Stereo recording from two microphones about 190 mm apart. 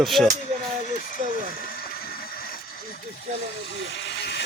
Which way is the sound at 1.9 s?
50° left (ahead or behind).